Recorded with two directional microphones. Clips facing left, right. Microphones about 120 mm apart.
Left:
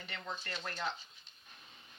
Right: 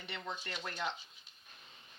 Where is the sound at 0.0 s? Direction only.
20° right (ahead or behind).